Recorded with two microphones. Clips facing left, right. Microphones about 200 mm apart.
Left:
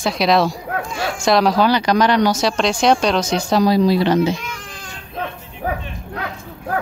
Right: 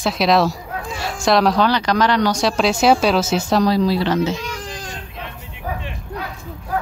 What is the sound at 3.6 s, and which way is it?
Speech, 15° left (ahead or behind).